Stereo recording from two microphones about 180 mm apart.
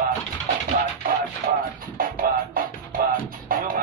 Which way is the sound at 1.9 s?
55° right (ahead or behind).